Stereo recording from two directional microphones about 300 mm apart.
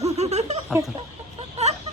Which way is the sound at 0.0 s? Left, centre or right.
Right.